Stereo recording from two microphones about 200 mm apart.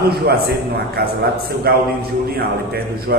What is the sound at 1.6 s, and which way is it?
A man's voice, 50° right (ahead or behind).